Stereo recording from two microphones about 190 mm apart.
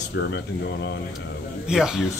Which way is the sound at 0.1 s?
70° left (ahead or behind).